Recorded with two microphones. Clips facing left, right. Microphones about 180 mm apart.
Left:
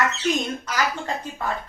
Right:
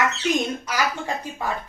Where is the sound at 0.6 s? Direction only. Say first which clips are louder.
Even; 10° right (ahead or behind).